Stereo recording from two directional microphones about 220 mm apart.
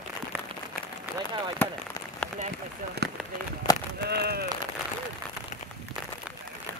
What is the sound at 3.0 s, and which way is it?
Run, 50° right (ahead or behind).